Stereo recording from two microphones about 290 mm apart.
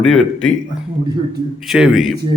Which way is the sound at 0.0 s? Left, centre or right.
Centre.